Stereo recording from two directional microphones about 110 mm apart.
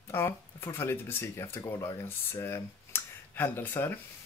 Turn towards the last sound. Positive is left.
turn(degrees=15)  # may be behind; listen again after turning